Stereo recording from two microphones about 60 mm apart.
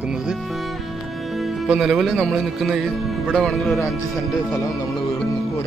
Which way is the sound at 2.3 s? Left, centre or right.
Centre.